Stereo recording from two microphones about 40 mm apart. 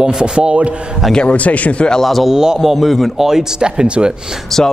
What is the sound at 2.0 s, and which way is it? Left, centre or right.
Speech, centre.